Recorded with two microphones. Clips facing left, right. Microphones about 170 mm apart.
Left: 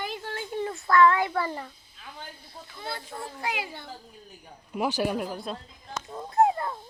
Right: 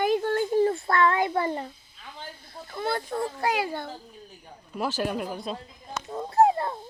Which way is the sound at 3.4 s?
40° right (ahead or behind).